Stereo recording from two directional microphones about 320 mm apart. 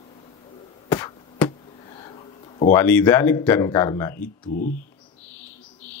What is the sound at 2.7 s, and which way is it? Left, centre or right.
Speech, centre.